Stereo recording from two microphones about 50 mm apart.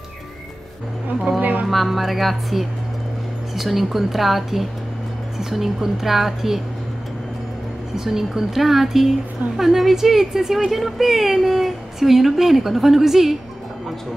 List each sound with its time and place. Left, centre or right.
1.4 s music: right
1.7 s speech: centre
7.9 s speech: centre